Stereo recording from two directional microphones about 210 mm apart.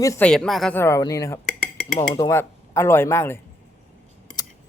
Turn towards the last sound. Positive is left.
turn(degrees=20)  # may be behind; listen again after turning